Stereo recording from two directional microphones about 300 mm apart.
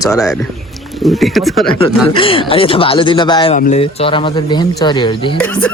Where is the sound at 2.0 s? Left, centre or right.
Centre.